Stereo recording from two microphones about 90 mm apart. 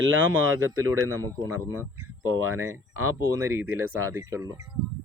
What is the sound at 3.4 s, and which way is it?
Speech, 25° right (ahead or behind).